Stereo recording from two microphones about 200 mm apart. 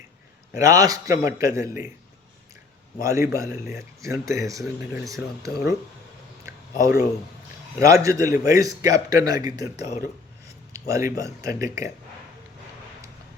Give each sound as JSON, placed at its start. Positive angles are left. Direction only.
{"t": 0.5, "sound": "a man's voice", "side_deg": -15}
{"t": 3.0, "sound": "a man's voice", "side_deg": -15}
{"t": 6.4, "sound": "a sound", "side_deg": -15}
{"t": 7.8, "sound": "a man's voice", "side_deg": -15}